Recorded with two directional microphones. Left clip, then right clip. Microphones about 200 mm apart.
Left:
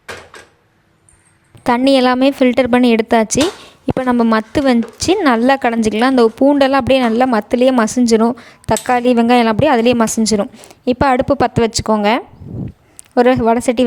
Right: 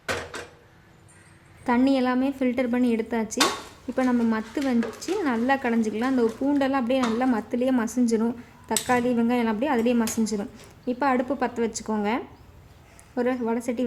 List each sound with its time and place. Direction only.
1.6 s a woman's voice: 50° left (ahead or behind)